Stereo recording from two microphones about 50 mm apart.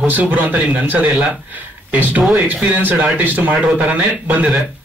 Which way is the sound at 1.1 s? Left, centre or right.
Right.